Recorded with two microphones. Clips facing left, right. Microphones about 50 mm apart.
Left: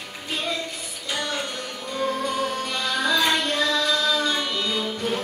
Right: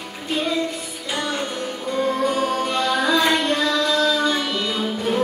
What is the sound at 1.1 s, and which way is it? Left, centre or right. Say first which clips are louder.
Music: right 3 dB; centre.